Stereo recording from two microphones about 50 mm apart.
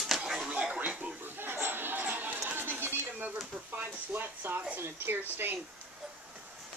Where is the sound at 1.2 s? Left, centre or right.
Right.